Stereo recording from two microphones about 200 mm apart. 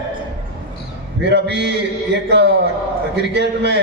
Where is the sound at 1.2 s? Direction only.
60° right (ahead or behind).